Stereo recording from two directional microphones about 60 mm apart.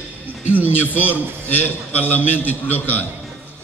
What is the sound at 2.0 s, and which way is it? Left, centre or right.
Speech, left.